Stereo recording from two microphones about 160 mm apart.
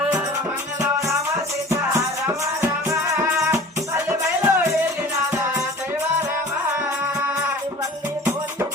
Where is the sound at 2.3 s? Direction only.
15° right (ahead or behind).